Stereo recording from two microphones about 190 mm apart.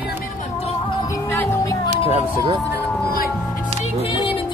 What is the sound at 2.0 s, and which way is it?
Speech, 25° right (ahead or behind).